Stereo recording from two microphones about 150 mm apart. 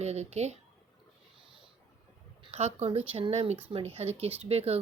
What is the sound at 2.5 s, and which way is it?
A woman's voice, 45° right (ahead or behind).